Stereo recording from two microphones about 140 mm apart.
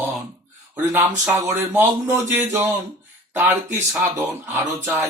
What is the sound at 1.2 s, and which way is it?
Speech, 15° right (ahead or behind).